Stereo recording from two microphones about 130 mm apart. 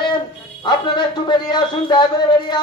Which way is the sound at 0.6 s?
35° left (ahead or behind).